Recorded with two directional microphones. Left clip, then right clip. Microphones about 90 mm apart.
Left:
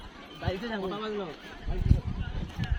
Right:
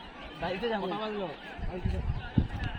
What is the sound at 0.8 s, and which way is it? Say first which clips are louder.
Speech: even; 30° left (ahead or behind).